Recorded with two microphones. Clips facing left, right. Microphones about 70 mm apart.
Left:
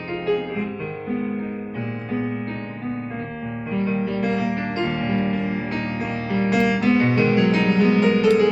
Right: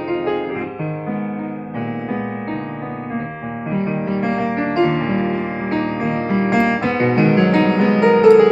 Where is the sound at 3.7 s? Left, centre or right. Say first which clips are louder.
Right 2 dB; right.